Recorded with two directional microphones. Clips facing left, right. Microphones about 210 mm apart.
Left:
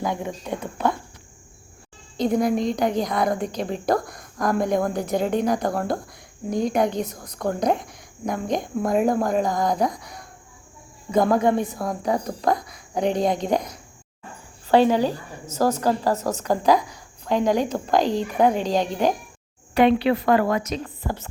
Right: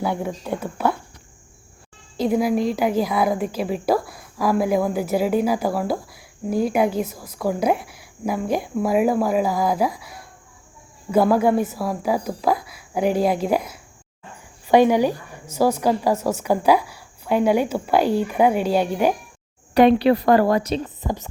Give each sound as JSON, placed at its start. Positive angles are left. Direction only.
{"t": 0.0, "sound": "a woman's voice", "side_deg": -10}
{"t": 2.1, "sound": "a woman's voice", "side_deg": -5}
{"t": 19.7, "sound": "a woman's voice", "side_deg": -40}
{"t": 21.0, "sound": "a woman's voice", "side_deg": -15}